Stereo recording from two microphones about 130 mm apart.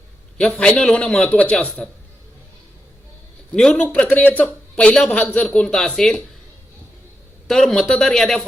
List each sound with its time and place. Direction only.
0.3 s a man's voice: 5° left (ahead or behind)
3.5 s a man's voice: 5° left (ahead or behind)
7.4 s a man's voice: 5° left (ahead or behind)